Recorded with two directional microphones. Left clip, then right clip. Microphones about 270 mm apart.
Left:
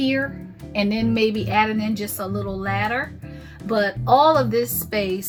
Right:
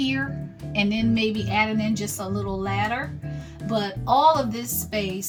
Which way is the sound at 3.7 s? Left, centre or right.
Centre.